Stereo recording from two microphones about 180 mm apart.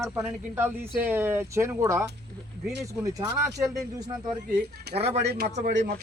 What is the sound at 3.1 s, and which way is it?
Speech, 20° right (ahead or behind).